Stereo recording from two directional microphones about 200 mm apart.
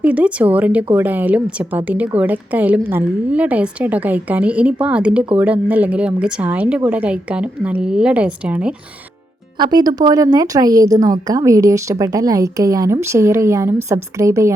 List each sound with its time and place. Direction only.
0.0 s a woman's voice: 5° right (ahead or behind)
9.6 s a woman's voice: 20° right (ahead or behind)